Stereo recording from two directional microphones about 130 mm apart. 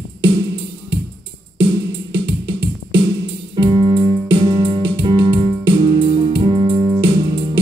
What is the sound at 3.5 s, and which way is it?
Piano, 40° right (ahead or behind).